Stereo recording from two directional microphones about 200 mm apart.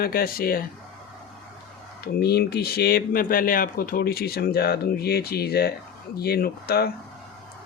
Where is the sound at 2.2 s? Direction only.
55° left (ahead or behind).